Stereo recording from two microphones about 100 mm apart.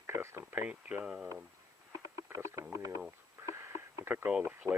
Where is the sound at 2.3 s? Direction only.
30° right (ahead or behind).